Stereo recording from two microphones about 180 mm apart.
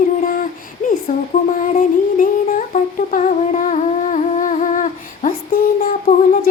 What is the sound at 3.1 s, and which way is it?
Humming, 40° left (ahead or behind).